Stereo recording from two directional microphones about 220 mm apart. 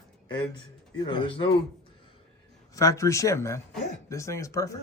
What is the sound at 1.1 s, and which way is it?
Speech, 20° left (ahead or behind).